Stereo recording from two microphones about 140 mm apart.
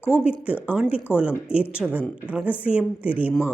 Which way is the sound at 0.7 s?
10° right (ahead or behind).